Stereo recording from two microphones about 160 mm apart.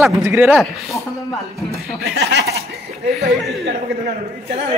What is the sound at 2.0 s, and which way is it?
Speech, 90° right.